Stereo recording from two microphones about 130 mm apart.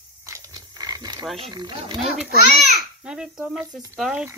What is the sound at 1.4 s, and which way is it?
Speech, 35° right (ahead or behind).